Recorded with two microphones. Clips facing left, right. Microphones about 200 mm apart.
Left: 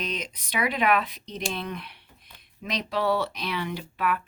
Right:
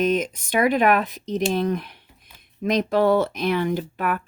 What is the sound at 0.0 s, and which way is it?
Speech, 50° right (ahead or behind).